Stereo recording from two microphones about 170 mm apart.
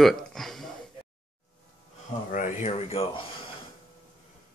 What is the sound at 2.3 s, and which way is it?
Speech, 50° left (ahead or behind).